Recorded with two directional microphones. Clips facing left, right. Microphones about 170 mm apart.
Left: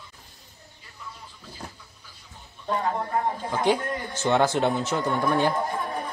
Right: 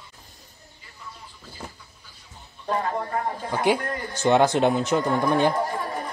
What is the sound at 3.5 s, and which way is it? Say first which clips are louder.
Speech: right 2 dB; 10° right (ahead or behind).